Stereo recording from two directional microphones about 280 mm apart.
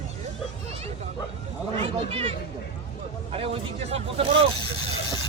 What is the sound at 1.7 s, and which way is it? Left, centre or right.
Speech, centre.